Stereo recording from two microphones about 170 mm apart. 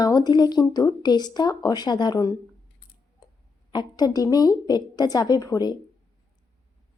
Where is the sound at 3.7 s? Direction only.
25° left (ahead or behind).